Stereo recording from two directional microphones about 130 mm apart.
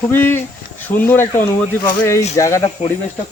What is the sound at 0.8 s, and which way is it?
Speech, 15° left (ahead or behind).